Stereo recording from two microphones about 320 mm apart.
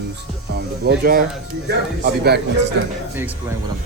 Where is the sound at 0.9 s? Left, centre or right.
Right.